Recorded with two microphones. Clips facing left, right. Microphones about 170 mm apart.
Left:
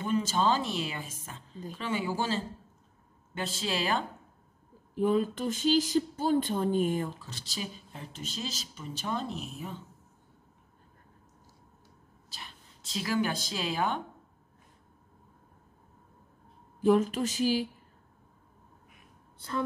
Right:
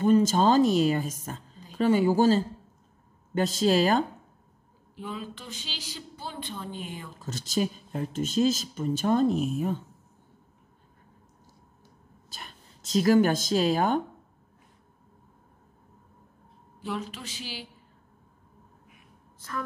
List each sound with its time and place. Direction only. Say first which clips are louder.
0.0 s speech: right 7 dB; 40° right (ahead or behind)
4.9 s speech: left 11 dB; 50° left (ahead or behind)
7.2 s speech: right 11 dB; 45° right (ahead or behind)
12.3 s a woman's voice: right 3 dB; 45° right (ahead or behind)
16.8 s speech: left 11 dB; 45° left (ahead or behind)
19.3 s a sound: left 2 dB; 30° left (ahead or behind)